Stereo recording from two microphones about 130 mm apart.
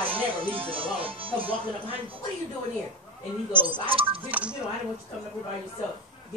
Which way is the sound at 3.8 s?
45° right (ahead or behind).